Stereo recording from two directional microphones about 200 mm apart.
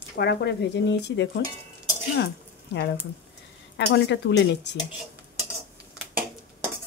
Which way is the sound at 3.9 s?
60° left (ahead or behind).